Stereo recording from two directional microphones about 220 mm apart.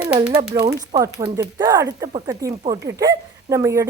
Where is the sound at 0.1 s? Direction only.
10° right (ahead or behind).